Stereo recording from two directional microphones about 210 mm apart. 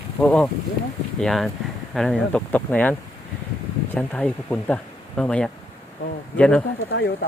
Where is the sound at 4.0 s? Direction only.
5° left (ahead or behind).